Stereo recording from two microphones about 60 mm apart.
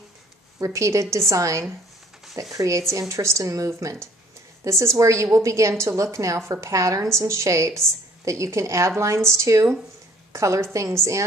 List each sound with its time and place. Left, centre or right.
0.7 s a woman's voice: right